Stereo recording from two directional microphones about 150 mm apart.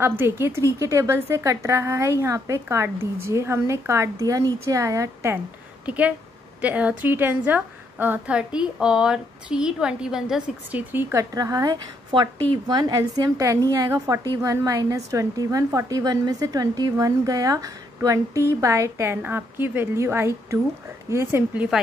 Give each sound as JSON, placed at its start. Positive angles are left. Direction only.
{"t": 0.2, "sound": "a woman's voice", "side_deg": -15}